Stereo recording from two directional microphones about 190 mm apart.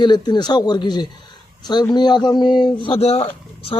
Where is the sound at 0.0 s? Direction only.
20° left (ahead or behind).